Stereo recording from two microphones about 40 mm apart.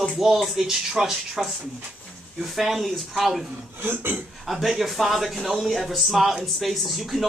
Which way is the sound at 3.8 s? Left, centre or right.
Right.